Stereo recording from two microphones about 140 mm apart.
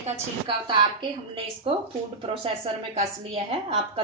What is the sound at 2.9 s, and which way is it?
A woman's voice, 45° right (ahead or behind).